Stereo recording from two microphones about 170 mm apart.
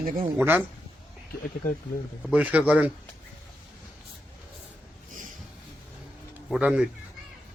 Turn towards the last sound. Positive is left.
turn(degrees=-5)  # may be behind; listen again after turning